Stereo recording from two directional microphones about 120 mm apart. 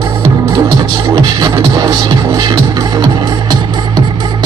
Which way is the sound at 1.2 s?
35° right (ahead or behind).